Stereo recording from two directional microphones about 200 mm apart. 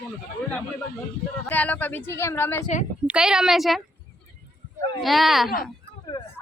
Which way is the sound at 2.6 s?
35° left (ahead or behind).